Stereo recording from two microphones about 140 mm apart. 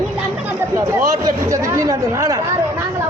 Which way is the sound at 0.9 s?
20° right (ahead or behind).